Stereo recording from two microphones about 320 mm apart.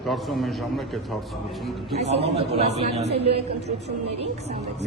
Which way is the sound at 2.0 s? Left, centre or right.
Centre.